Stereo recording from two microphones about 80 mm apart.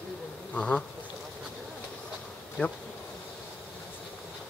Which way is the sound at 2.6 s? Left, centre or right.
Centre.